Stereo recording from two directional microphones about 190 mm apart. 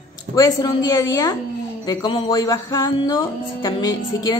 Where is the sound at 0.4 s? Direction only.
20° left (ahead or behind).